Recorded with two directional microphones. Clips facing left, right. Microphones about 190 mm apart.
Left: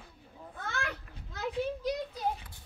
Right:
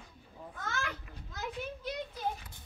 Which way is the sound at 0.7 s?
60° left (ahead or behind).